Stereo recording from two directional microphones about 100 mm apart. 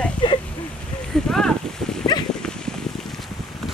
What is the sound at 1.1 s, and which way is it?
Speech, 5° left (ahead or behind).